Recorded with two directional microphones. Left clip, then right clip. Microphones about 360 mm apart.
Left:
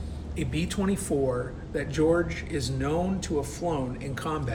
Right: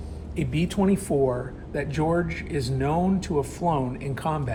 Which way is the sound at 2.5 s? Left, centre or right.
Centre.